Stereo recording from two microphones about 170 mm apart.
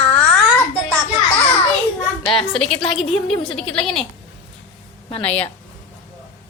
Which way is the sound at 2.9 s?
Centre (ahead or behind).